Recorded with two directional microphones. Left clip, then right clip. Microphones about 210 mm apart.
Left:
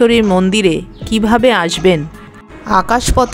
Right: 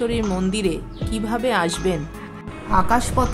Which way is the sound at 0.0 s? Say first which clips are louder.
Left 12 dB; 30° left (ahead or behind).